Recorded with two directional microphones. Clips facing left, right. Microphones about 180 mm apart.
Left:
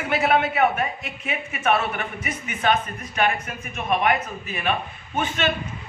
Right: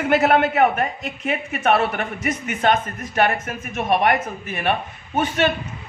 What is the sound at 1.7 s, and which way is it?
A man's voice, 60° right (ahead or behind).